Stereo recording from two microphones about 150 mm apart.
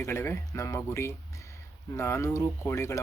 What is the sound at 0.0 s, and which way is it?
Speech, 15° left (ahead or behind).